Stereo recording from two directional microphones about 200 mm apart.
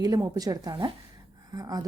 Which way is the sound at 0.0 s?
20° right (ahead or behind).